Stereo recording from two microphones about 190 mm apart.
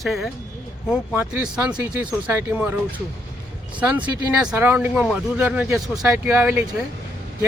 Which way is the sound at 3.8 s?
5° right (ahead or behind).